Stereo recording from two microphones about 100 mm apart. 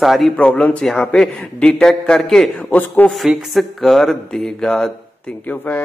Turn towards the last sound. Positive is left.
turn(degrees=15)  # may be behind; listen again after turning